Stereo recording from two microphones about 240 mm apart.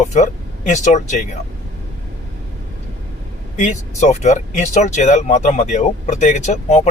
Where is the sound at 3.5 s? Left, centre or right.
Left.